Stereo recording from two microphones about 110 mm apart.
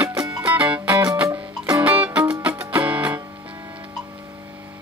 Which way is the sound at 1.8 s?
15° right (ahead or behind).